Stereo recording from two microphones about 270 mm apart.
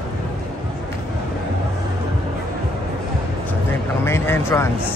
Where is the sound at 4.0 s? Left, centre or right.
Centre.